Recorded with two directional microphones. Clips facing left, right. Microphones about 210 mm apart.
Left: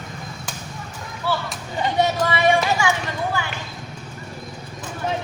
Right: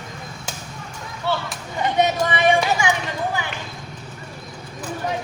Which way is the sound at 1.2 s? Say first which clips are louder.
Even; 25° right (ahead or behind).